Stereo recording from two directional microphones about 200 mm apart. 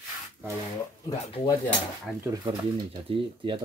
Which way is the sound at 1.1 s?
20° left (ahead or behind).